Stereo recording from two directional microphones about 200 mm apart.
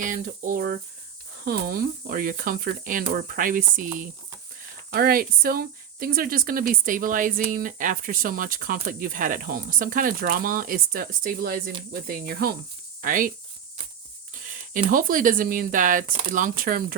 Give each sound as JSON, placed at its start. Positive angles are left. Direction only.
{"t": 0.0, "sound": "speech", "side_deg": -40}
{"t": 4.9, "sound": "speech", "side_deg": -50}
{"t": 14.3, "sound": "speech", "side_deg": -40}